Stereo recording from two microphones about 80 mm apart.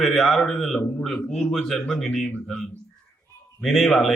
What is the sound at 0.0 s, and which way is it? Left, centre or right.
A man's voice, centre.